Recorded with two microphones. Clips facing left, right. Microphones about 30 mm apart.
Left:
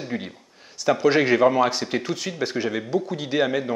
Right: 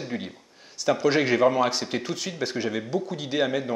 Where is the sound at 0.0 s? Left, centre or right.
Centre.